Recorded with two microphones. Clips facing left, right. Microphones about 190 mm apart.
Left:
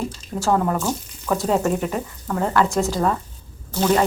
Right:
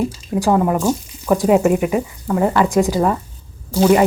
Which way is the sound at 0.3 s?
15° right (ahead or behind).